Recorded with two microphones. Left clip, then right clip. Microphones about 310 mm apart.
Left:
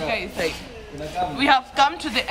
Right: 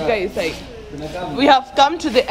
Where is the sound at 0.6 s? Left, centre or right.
Centre.